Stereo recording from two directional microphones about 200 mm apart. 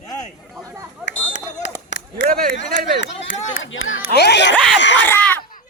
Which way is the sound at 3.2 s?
70° left (ahead or behind).